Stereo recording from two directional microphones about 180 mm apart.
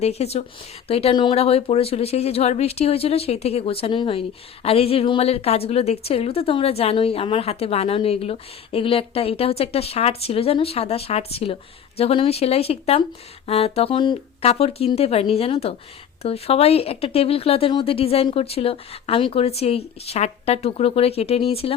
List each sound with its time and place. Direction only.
0.0 s speech: 35° left (ahead or behind)